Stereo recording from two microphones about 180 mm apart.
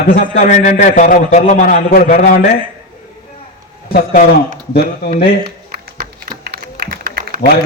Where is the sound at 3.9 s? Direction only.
55° left (ahead or behind).